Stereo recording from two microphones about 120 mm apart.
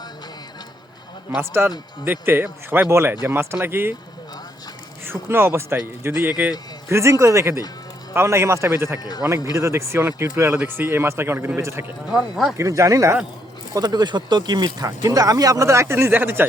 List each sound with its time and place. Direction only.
1.4 s speech: 20° right (ahead or behind)
5.0 s speech: 20° right (ahead or behind)
12.1 s speech: centre (ahead or behind)
12.5 s speech: 25° right (ahead or behind)